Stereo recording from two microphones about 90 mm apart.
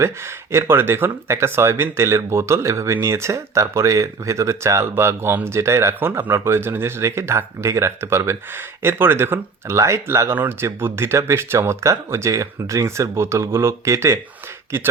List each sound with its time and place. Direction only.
0.0 s speech: 30° right (ahead or behind)